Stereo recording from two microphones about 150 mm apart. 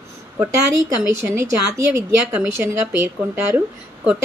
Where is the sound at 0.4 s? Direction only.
15° right (ahead or behind).